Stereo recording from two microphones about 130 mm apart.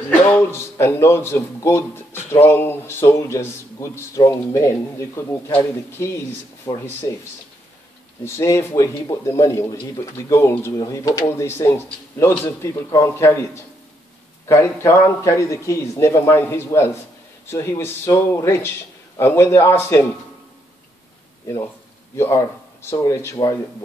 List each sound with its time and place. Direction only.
0.2 s a man's voice: 20° left (ahead or behind)
8.2 s a man's voice: 20° left (ahead or behind)
14.5 s a man's voice: 20° left (ahead or behind)
22.1 s speech: 20° left (ahead or behind)